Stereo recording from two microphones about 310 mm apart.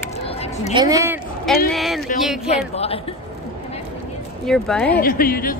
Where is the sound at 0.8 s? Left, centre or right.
Centre.